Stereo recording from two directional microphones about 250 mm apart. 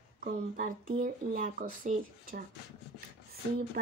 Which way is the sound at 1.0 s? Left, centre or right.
Right.